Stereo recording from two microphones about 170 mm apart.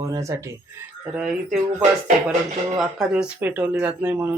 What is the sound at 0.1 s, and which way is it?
Speech, 20° right (ahead or behind).